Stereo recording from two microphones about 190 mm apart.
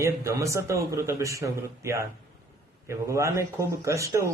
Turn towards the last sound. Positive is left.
turn(degrees=-15)  # may be behind; listen again after turning